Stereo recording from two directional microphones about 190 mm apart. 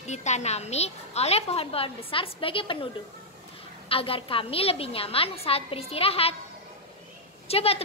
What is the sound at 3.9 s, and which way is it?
A woman's voice, 30° left (ahead or behind).